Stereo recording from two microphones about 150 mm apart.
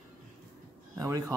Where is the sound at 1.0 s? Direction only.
20° right (ahead or behind).